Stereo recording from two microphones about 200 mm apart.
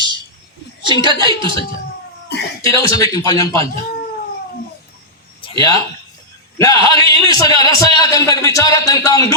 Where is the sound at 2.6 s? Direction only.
15° left (ahead or behind).